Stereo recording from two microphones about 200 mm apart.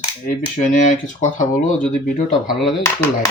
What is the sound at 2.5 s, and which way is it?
Speech, centre (ahead or behind).